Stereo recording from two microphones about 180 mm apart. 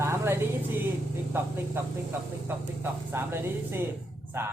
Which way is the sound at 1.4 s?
10° right (ahead or behind).